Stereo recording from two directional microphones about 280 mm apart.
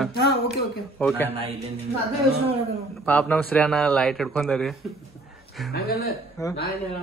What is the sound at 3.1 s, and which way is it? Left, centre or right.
Speech, centre.